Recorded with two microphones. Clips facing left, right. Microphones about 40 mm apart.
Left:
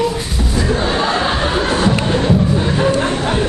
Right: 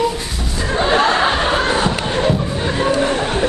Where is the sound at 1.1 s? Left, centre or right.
Centre.